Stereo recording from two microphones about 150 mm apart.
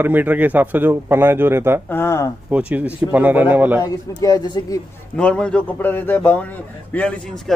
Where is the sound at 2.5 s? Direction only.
10° right (ahead or behind).